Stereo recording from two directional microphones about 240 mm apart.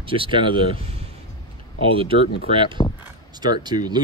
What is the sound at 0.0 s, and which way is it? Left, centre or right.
Speech, right.